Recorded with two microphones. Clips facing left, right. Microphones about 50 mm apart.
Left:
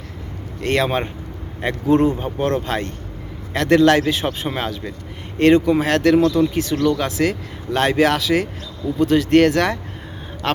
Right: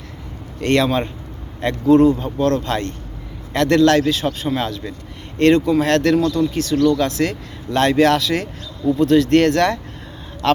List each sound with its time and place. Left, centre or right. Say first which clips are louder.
0.6 s speech: right 3 dB; centre
0.9 s speech: right 2 dB; left
2.6 s speech: right 1 dB; centre; by 4.6 s left
4.6 s speech: right 1 dB; centre